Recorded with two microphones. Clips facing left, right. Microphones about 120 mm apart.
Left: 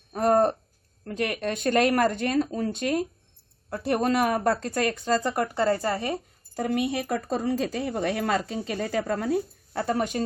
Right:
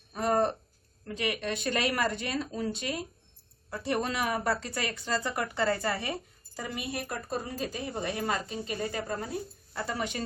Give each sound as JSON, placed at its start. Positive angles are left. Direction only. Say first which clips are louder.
{"t": 0.1, "sound": "a sound", "louder": "left 6 dB", "side_deg": 45}
{"t": 1.0, "sound": "speech", "louder": "left 4 dB", "side_deg": 50}
{"t": 9.8, "sound": "speech", "louder": "left 7 dB", "side_deg": 45}